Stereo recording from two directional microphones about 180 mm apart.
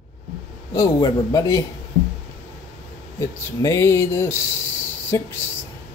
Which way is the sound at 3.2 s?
15° left (ahead or behind).